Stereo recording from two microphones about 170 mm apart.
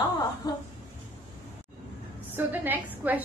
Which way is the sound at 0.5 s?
25° left (ahead or behind).